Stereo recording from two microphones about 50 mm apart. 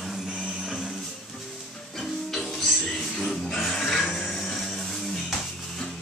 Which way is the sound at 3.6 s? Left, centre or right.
Centre.